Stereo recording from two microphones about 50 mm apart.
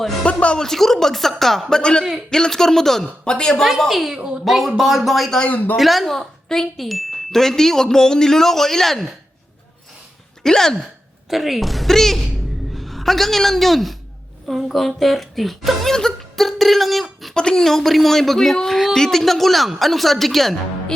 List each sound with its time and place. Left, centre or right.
0.3 s speech: left
0.6 s speech: centre
1.7 s speech: centre
3.6 s speech: centre
4.1 s a woman's voice: centre
4.4 s speech: centre
5.5 s speech: left
5.7 s speech: centre
10.4 s speech: centre
11.3 s a man's voice: centre
17.3 s speech: centre